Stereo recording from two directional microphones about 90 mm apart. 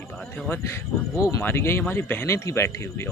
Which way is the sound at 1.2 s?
35° left (ahead or behind).